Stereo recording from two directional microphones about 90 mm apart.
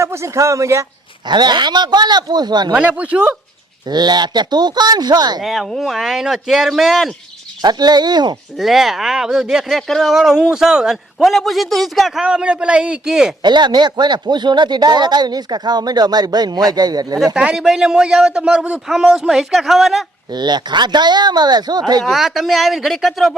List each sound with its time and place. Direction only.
0.0 s speech: 30° right (ahead or behind)
1.3 s speech: 55° right (ahead or behind)
2.7 s a man's voice: 15° right (ahead or behind)
3.8 s speech: 50° right (ahead or behind)
5.4 s speech: centre (ahead or behind)
7.6 s speech: 50° right (ahead or behind)
8.5 s speech: centre (ahead or behind)
12.2 s a man's voice: 10° right (ahead or behind)
13.4 s speech: 55° right (ahead or behind)
17.3 s a man's voice: 10° right (ahead or behind)
20.3 s speech: 55° right (ahead or behind)
22.0 s speech: centre (ahead or behind)